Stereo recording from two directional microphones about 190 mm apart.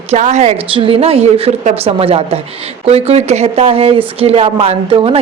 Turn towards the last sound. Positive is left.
turn(degrees=-30)  # may be behind; listen again after turning